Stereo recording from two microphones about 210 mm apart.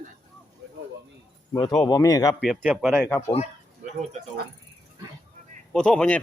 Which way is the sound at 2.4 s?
5° right (ahead or behind).